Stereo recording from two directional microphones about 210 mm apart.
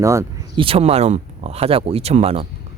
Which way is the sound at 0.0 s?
15° right (ahead or behind).